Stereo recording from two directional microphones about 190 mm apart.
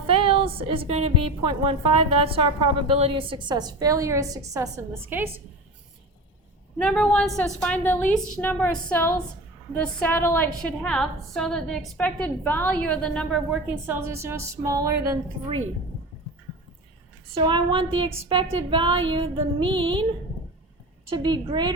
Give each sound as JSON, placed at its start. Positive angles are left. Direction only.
{"t": 0.1, "sound": "a woman's voice", "side_deg": -30}
{"t": 6.7, "sound": "a woman's voice", "side_deg": 5}
{"t": 13.8, "sound": "speech", "side_deg": -10}
{"t": 17.3, "sound": "a woman's voice", "side_deg": -25}
{"t": 21.1, "sound": "a woman's voice", "side_deg": -25}